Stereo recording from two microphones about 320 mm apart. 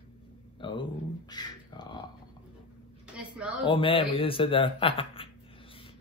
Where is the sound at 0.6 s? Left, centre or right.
Centre.